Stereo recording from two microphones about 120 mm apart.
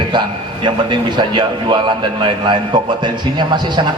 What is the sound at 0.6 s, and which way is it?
A man's voice, 40° right (ahead or behind).